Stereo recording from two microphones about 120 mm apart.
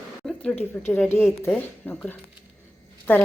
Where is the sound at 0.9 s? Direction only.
15° left (ahead or behind).